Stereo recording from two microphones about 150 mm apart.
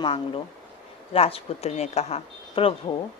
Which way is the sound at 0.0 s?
35° left (ahead or behind).